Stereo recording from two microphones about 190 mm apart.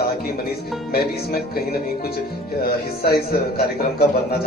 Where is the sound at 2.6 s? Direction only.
55° left (ahead or behind).